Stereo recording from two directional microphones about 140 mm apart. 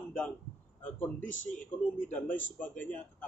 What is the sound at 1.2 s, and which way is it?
Speech, 65° left (ahead or behind).